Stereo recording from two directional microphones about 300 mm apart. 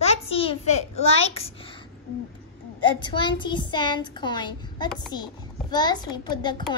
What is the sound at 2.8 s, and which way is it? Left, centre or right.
A child's voice, centre.